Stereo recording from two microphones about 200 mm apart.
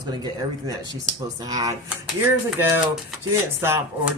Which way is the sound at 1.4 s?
20° right (ahead or behind).